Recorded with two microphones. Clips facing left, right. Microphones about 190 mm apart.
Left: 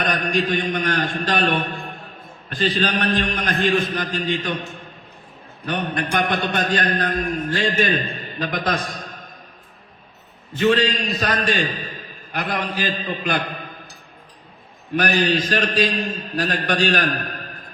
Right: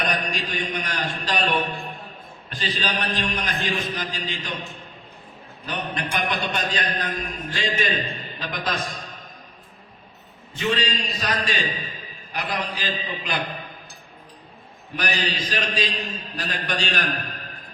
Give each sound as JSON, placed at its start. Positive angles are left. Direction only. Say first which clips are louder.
{"t": 0.0, "sound": "a man's voice", "louder": "left 5 dB", "side_deg": 55}
{"t": 5.6, "sound": "a man's voice", "louder": "left 5 dB", "side_deg": 55}
{"t": 10.6, "sound": "a man's voice", "louder": "left 7 dB", "side_deg": 55}
{"t": 14.9, "sound": "a man's voice", "louder": "left 8 dB", "side_deg": 55}